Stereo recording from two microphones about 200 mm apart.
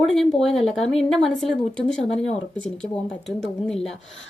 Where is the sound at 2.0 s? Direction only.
30° left (ahead or behind).